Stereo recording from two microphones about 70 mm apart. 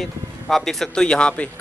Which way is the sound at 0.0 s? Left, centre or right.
Centre.